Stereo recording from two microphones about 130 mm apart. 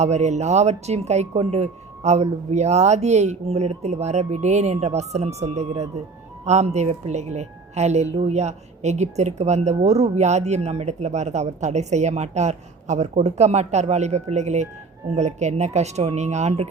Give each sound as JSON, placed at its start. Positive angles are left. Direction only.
{"t": 0.0, "sound": "a woman's voice", "side_deg": -60}